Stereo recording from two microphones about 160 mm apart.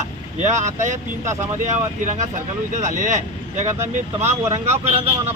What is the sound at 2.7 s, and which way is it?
Speech, 50° right (ahead or behind).